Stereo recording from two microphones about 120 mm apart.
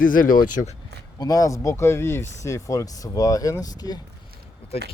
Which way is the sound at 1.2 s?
30° left (ahead or behind).